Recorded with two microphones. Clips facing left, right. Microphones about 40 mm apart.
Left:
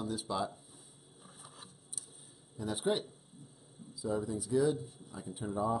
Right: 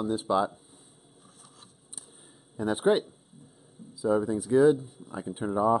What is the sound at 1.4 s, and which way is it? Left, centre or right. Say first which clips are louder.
Mechanisms: left 2 dB; centre.